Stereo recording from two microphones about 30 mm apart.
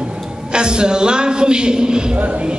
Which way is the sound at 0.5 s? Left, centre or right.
Right.